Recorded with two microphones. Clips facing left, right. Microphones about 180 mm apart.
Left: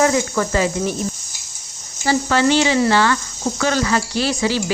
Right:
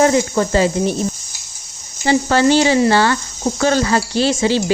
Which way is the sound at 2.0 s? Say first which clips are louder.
Right 3 dB; 30° right (ahead or behind).